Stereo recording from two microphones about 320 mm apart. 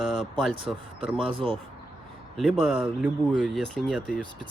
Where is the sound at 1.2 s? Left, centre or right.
Centre.